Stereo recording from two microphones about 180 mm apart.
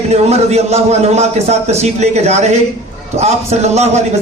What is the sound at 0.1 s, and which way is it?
A man's voice, 35° right (ahead or behind).